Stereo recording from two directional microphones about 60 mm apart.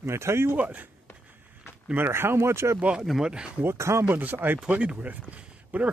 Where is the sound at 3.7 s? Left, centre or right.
Right.